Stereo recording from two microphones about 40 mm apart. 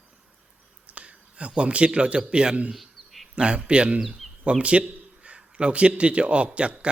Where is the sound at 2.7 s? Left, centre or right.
Centre.